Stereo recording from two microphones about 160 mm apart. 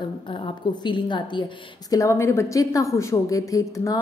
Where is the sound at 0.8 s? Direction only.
30° left (ahead or behind).